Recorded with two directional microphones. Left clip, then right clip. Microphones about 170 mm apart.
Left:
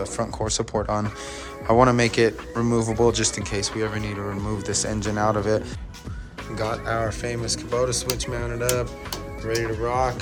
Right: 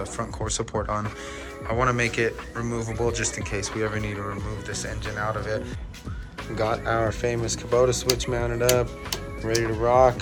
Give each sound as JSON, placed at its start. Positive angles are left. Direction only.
{"t": 0.0, "sound": "speech", "side_deg": 20}
{"t": 1.6, "sound": "speech", "side_deg": 35}
{"t": 3.5, "sound": "speech", "side_deg": 15}
{"t": 4.6, "sound": "speech", "side_deg": 40}
{"t": 6.6, "sound": "speech", "side_deg": 10}